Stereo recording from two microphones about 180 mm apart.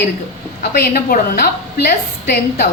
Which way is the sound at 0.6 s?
60° left (ahead or behind).